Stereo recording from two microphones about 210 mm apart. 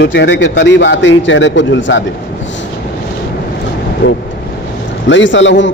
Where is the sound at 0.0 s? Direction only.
55° left (ahead or behind).